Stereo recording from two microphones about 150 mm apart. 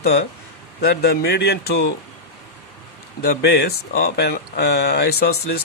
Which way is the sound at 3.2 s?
90° left.